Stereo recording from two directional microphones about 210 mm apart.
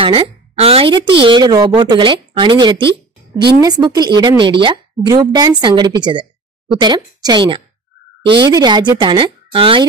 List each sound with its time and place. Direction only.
0.0 s a woman's voice: 25° right (ahead or behind)